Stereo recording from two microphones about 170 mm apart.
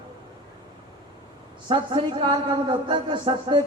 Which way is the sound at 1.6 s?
30° right (ahead or behind).